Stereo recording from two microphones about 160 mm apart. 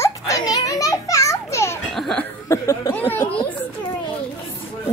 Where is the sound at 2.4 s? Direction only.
20° left (ahead or behind).